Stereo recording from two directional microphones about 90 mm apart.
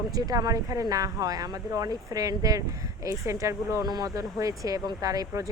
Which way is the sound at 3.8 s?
50° right (ahead or behind).